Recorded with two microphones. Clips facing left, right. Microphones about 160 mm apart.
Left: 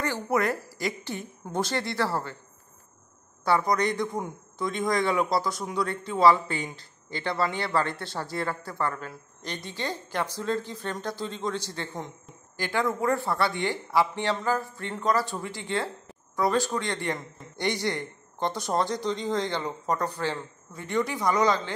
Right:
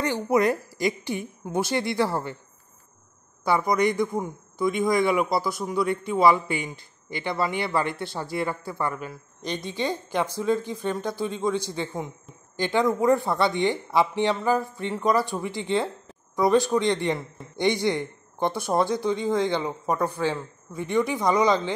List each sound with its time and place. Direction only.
0.0 s speech: 20° right (ahead or behind)
3.4 s speech: 10° right (ahead or behind)
12.5 s speech: 20° right (ahead or behind)